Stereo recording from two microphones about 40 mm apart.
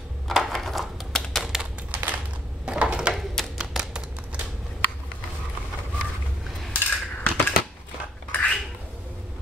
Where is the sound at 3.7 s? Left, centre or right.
Centre.